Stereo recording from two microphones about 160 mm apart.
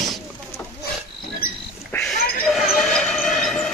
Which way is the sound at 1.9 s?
15° left (ahead or behind).